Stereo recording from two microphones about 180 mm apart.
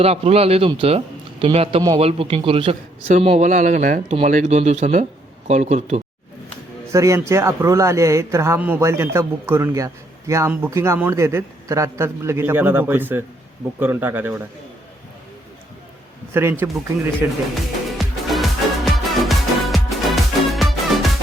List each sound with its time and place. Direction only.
0.0 s a man's voice: 35° right (ahead or behind)
6.9 s a man's voice: 15° right (ahead or behind)
16.3 s a man's voice: 15° right (ahead or behind)
17.5 s music: centre (ahead or behind)